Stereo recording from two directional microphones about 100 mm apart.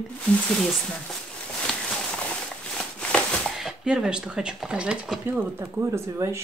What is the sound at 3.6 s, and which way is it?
A woman's voice, 5° right (ahead or behind).